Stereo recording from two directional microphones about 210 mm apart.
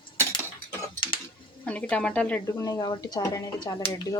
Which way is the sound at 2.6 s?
15° left (ahead or behind).